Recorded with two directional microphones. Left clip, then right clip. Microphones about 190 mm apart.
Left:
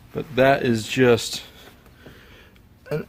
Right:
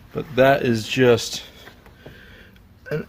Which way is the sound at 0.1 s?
Centre (ahead or behind).